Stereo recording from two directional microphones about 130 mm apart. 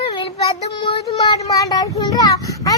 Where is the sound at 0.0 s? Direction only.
40° left (ahead or behind).